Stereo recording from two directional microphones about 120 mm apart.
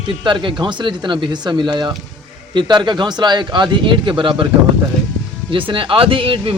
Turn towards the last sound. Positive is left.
turn(degrees=-50)  # may be behind; listen again after turning